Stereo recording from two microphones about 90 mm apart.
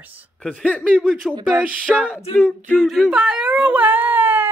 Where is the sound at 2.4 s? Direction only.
15° left (ahead or behind).